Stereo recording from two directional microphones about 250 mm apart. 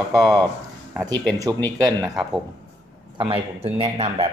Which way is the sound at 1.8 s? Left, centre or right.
Centre.